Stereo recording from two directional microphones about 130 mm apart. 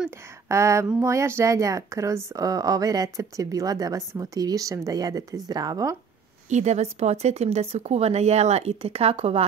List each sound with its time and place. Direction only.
0.5 s speech: 20° right (ahead or behind)
6.5 s a woman's voice: 60° right (ahead or behind)